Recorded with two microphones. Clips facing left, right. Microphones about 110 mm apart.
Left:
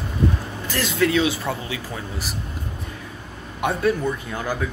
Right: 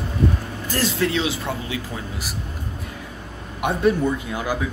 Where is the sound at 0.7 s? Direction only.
30° right (ahead or behind).